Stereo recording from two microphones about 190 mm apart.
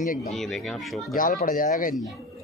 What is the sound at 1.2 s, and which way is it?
Speech, 45° left (ahead or behind).